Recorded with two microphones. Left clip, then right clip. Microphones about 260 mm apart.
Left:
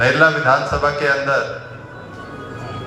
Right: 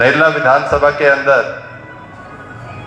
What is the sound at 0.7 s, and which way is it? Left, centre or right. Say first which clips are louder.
Speech: right 7 dB; right.